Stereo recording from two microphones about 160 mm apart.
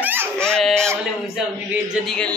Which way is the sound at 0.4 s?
5° left (ahead or behind).